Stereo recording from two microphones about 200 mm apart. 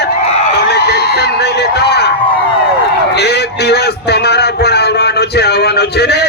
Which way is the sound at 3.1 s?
55° left (ahead or behind).